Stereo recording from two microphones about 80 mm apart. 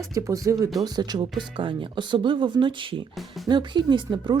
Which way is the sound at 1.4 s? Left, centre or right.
Right.